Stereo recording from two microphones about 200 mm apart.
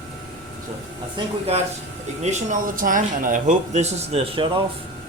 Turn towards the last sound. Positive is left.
turn(degrees=-30)  # may be behind; listen again after turning